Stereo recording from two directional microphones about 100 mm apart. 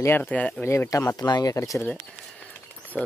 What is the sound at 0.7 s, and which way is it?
Speech, 30° left (ahead or behind).